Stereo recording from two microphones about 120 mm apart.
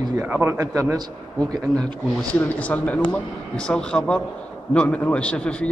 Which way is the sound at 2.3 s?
15° left (ahead or behind).